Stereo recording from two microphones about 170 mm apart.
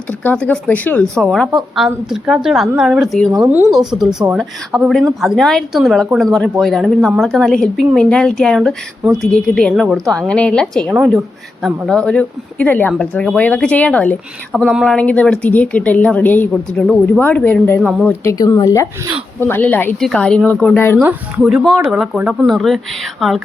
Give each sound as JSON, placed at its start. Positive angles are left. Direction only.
{"t": 0.1, "sound": "a woman's voice", "side_deg": 10}
{"t": 14.6, "sound": "speech", "side_deg": -5}
{"t": 14.8, "sound": "a woman's voice", "side_deg": 5}
{"t": 21.0, "sound": "speech", "side_deg": -10}